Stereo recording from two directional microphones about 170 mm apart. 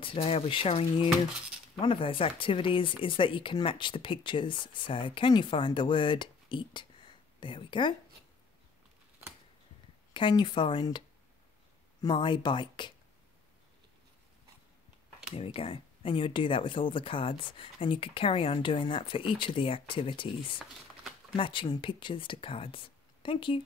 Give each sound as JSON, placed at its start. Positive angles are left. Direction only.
{"t": 0.0, "sound": "speech", "side_deg": 35}
{"t": 10.1, "sound": "speech", "side_deg": 30}
{"t": 15.3, "sound": "speech", "side_deg": 35}
{"t": 21.4, "sound": "speech", "side_deg": 30}